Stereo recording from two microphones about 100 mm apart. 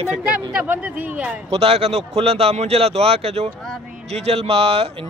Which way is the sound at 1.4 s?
90° right.